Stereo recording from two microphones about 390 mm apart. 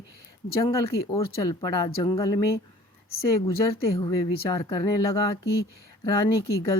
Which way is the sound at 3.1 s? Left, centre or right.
Left.